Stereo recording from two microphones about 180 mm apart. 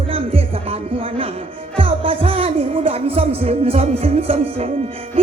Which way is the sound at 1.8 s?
30° right (ahead or behind).